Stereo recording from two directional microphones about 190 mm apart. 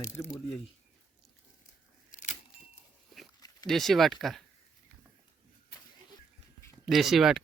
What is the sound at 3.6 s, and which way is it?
Speech, centre (ahead or behind).